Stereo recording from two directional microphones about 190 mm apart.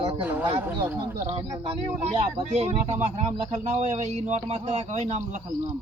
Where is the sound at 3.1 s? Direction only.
35° right (ahead or behind).